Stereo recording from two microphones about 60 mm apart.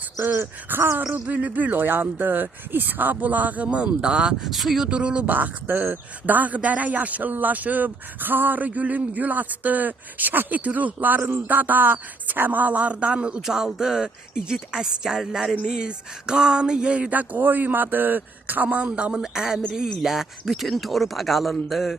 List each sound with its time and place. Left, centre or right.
0.3 s speech: right
1.3 s speech: right
4.4 s speech: centre
4.9 s speech: centre
13.4 s speech: centre